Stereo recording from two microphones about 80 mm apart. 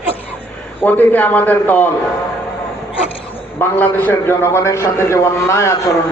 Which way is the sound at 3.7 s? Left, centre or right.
Left.